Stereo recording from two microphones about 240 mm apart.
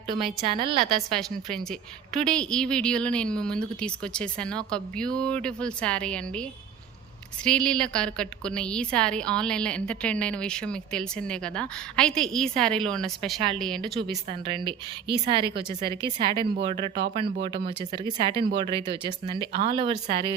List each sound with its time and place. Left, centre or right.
0.4 s speech: right
0.9 s a woman's voice: centre
14.3 s speech: right